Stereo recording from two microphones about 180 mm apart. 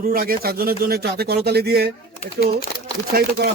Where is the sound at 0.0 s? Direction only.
55° right (ahead or behind).